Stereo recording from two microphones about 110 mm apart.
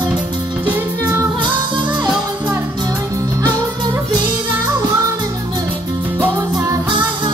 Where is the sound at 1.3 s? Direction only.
45° right (ahead or behind).